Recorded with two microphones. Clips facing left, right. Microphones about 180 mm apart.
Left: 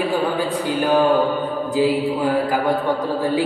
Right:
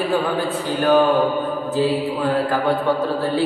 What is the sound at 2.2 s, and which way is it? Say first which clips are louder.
Mantra: even; 10° left (ahead or behind).